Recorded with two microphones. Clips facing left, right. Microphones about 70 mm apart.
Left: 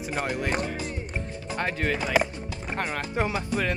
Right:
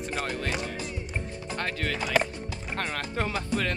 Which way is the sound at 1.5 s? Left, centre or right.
Centre.